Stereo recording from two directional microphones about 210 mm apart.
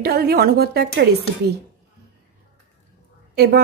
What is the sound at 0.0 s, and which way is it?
A woman's voice, 50° right (ahead or behind).